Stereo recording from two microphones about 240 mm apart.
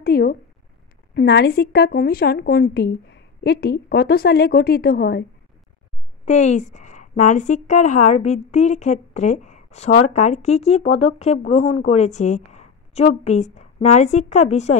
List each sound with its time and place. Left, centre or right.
0.0 s a woman's voice: left
6.2 s a woman's voice: left